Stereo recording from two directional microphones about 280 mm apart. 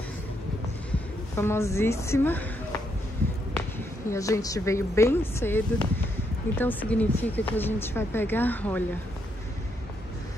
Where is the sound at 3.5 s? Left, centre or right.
Centre.